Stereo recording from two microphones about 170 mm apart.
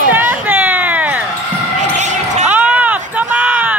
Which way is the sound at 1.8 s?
45° right (ahead or behind).